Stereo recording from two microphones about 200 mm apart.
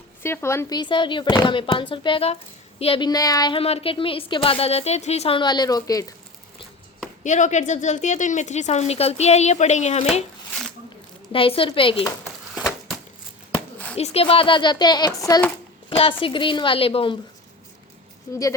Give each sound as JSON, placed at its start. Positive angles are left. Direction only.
{"t": 0.2, "sound": "a woman's voice", "side_deg": 10}
{"t": 7.3, "sound": "a woman's voice", "side_deg": 35}
{"t": 11.3, "sound": "a woman's voice", "side_deg": 25}
{"t": 13.9, "sound": "a woman's voice", "side_deg": 30}